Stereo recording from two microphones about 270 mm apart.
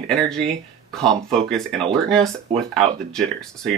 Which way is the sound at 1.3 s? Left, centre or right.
Centre.